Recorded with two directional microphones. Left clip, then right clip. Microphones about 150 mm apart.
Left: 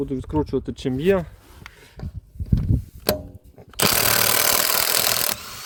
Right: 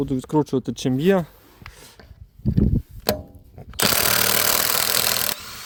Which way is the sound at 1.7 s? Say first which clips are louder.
Right 2 dB; 45° right (ahead or behind).